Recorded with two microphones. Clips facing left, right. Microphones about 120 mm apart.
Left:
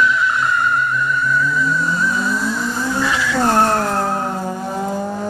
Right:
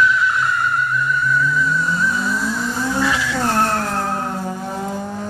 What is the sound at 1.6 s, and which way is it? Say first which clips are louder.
Vehicle: left 1 dB; 5° left (ahead or behind).